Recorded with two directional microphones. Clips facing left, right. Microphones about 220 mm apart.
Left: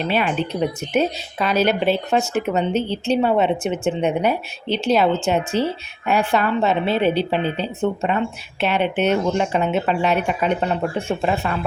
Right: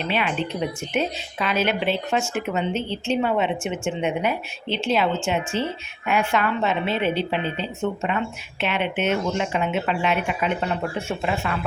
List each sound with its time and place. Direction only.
0.0 s speech: 40° left (ahead or behind)